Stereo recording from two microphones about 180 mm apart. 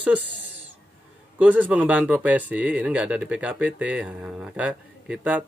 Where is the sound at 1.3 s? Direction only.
10° right (ahead or behind).